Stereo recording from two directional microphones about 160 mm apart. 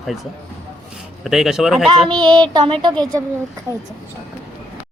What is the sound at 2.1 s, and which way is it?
Child singing, 25° right (ahead or behind).